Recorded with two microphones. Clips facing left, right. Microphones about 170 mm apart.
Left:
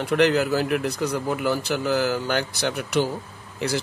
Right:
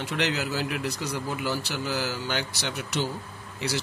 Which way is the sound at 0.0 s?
55° left (ahead or behind).